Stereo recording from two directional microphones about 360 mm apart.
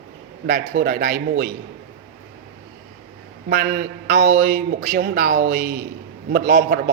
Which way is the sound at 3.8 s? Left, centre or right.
Right.